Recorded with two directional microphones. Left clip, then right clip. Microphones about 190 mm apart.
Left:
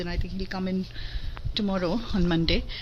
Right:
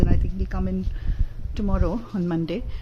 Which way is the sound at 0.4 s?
Centre (ahead or behind).